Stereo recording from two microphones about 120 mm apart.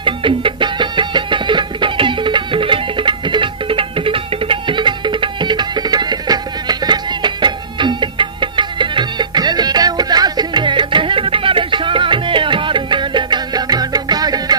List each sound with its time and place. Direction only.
0.0 s music: 45° right (ahead or behind)